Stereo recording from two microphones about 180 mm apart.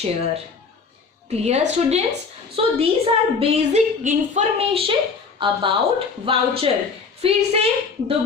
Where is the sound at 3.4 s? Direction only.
40° right (ahead or behind).